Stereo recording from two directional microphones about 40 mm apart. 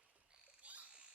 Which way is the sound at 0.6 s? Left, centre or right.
Right.